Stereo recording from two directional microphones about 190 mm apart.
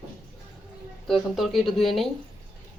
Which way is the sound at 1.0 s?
Centre (ahead or behind).